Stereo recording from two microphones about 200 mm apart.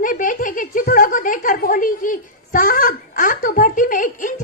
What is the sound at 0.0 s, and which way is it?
Giggle, 40° left (ahead or behind).